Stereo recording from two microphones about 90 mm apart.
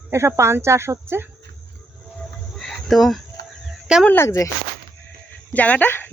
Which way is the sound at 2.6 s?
Centre (ahead or behind).